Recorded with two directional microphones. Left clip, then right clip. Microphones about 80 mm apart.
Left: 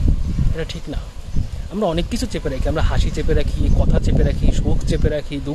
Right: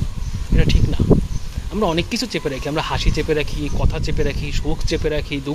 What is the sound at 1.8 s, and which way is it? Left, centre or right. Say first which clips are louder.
Speech: right 1 dB; left.